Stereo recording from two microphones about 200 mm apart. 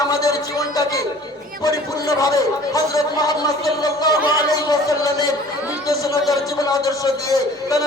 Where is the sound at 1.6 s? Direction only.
15° left (ahead or behind).